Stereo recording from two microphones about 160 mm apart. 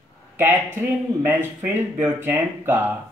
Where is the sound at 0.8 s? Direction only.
10° right (ahead or behind).